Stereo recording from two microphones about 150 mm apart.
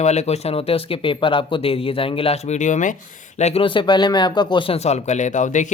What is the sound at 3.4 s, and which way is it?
Speech, 45° left (ahead or behind).